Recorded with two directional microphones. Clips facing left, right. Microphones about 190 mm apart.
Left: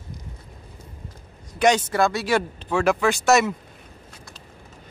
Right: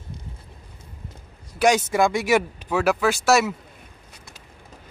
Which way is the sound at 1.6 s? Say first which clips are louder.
Even; 10° right (ahead or behind).